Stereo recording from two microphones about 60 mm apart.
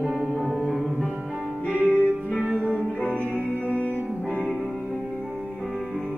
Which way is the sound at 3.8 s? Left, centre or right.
Left.